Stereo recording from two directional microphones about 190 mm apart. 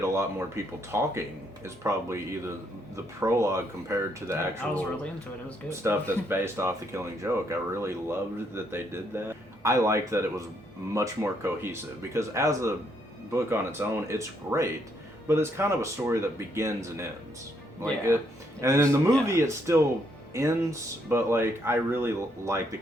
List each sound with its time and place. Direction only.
0.0 s speech: 15° right (ahead or behind)
5.6 s speech: 15° right (ahead or behind)
18.6 s speech: 15° right (ahead or behind)